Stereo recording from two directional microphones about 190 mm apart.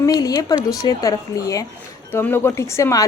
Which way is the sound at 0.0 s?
20° left (ahead or behind).